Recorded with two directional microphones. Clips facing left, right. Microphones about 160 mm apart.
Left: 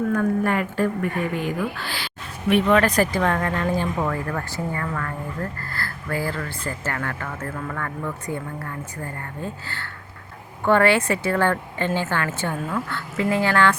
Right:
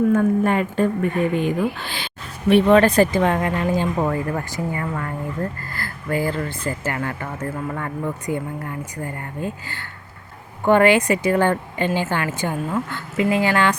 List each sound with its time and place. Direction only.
0.1 s speech: 20° right (ahead or behind)